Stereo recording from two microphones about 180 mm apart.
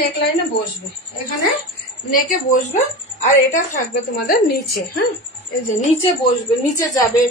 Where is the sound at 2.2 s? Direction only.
45° left (ahead or behind).